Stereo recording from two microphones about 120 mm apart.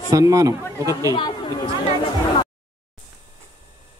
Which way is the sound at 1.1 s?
40° left (ahead or behind).